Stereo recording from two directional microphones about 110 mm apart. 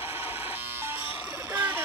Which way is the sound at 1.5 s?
15° right (ahead or behind).